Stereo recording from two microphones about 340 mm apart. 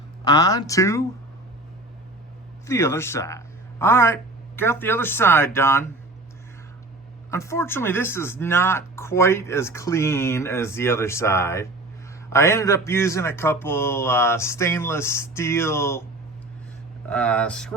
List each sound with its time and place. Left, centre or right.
0.3 s speech: centre
2.6 s speech: centre
7.3 s speech: centre
17.1 s speech: centre